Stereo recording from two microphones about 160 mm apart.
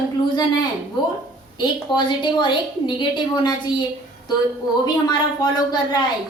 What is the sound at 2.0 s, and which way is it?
A woman's voice, 30° left (ahead or behind).